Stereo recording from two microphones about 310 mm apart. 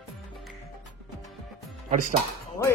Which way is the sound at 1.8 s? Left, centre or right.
Right.